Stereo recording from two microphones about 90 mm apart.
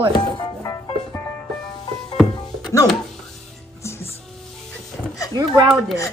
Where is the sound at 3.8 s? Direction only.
30° left (ahead or behind).